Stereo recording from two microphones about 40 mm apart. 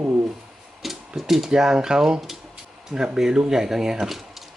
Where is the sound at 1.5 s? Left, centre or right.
Centre.